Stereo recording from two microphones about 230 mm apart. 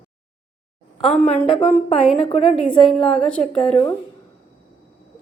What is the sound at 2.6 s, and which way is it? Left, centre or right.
Speech, centre.